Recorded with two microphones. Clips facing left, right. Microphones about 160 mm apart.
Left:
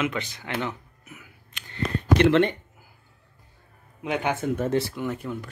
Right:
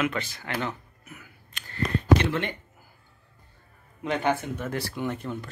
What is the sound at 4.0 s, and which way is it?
Speech, 15° left (ahead or behind).